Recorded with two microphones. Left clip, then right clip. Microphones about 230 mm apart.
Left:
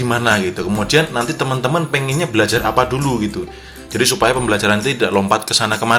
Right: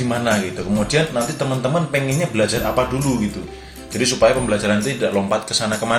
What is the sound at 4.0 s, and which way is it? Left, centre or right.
Speech, left.